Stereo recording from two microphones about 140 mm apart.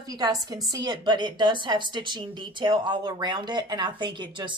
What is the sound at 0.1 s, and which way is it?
A woman's voice, 25° right (ahead or behind).